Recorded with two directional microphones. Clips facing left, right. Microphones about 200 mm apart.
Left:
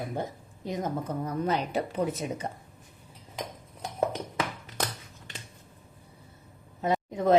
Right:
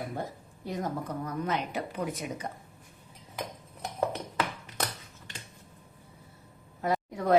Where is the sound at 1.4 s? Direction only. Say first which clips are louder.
Left 5 dB; 30° left (ahead or behind).